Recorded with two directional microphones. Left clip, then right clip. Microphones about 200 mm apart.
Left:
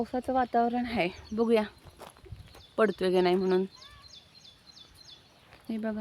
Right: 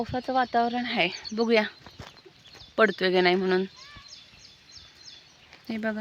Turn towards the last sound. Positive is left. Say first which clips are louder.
# right 4 dB
turn(degrees=0)  # may be behind; listen again after turning